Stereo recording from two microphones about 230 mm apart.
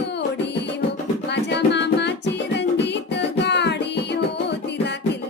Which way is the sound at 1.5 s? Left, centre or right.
Left.